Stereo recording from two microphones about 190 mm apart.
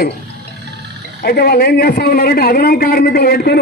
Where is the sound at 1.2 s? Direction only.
55° left (ahead or behind).